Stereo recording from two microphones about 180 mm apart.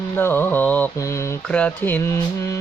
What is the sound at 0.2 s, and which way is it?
Speech, 10° left (ahead or behind).